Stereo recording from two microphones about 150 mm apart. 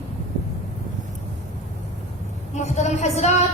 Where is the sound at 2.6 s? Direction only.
50° left (ahead or behind).